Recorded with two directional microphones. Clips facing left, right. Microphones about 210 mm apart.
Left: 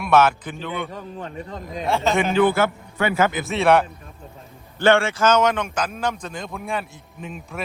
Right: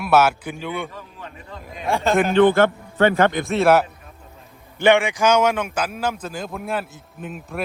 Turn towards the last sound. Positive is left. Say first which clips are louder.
# right 2 dB
turn(degrees=0)  # may be behind; listen again after turning